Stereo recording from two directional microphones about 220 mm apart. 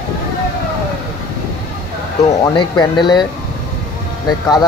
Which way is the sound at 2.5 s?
20° left (ahead or behind).